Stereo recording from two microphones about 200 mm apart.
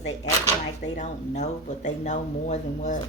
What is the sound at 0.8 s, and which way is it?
Speech, 35° left (ahead or behind).